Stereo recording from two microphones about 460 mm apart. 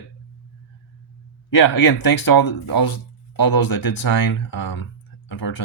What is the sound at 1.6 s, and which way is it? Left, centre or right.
Speech, left.